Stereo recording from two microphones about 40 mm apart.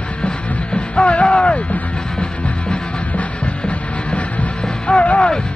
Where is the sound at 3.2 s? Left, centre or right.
Left.